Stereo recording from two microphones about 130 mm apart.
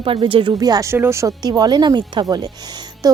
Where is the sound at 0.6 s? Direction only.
30° right (ahead or behind).